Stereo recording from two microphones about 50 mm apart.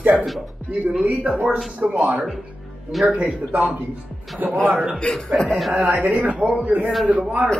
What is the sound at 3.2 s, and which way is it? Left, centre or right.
Speech, right.